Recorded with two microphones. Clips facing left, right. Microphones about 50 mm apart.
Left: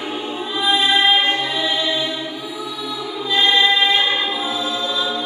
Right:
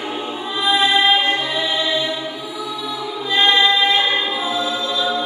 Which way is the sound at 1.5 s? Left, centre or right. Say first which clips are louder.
Even; centre.